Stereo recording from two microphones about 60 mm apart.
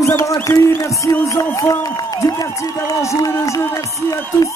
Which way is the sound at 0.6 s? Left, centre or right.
Left.